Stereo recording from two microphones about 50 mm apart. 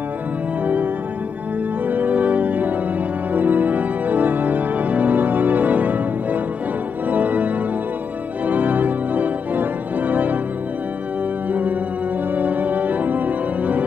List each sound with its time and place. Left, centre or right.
1.9 s music: right
3.3 s organ: right
12.4 s organ: right